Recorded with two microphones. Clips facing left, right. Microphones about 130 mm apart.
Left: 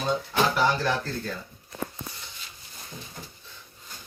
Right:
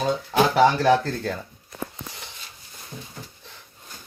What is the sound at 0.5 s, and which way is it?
Speech, 75° right (ahead or behind).